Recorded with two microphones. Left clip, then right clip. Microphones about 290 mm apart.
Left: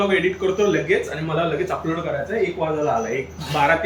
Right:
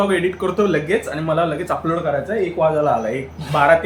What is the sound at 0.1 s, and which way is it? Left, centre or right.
Speech, centre.